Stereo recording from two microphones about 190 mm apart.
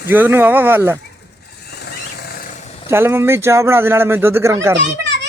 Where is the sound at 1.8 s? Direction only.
55° left (ahead or behind).